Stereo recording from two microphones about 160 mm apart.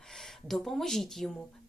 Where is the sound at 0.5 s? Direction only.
Centre (ahead or behind).